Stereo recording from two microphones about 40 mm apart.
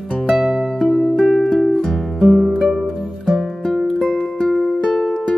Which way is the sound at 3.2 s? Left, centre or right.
Centre.